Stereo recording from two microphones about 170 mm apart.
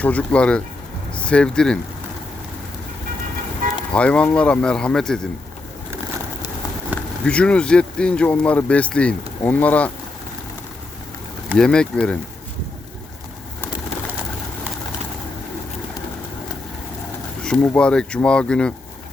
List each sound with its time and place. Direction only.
0.0 s speech: 10° left (ahead or behind)
3.6 s vehicle: 55° right (ahead or behind)
3.9 s speech: 5° left (ahead or behind)
6.9 s speech: 5° left (ahead or behind)
11.5 s speech: 5° left (ahead or behind)
17.4 s speech: 5° left (ahead or behind)